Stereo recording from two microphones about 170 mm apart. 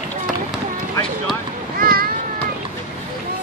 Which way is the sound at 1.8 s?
60° right (ahead or behind).